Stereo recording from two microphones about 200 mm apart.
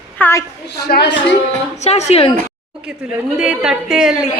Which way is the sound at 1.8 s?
35° left (ahead or behind).